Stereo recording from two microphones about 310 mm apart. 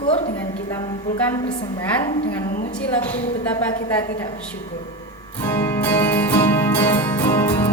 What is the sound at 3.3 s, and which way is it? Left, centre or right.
Speech, centre.